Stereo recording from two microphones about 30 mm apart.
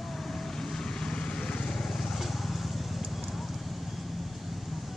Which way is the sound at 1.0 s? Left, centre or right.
Left.